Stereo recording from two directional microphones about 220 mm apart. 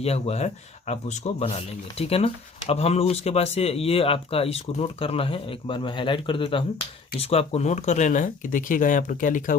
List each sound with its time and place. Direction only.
0.0 s a man's voice: 30° left (ahead or behind)